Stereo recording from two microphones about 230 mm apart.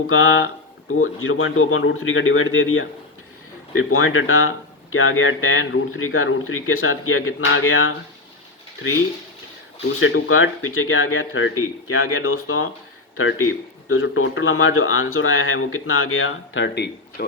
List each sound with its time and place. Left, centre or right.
0.1 s speech: left
10.0 s speech: left